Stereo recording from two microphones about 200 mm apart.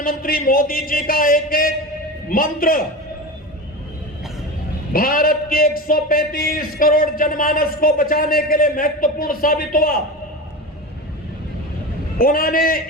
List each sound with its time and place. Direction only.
0.0 s a man's voice: 45° left (ahead or behind)
4.9 s a man's voice: 45° left (ahead or behind)
12.2 s a man's voice: 45° left (ahead or behind)